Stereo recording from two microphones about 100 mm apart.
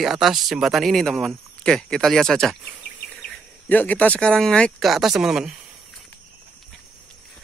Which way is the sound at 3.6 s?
15° left (ahead or behind).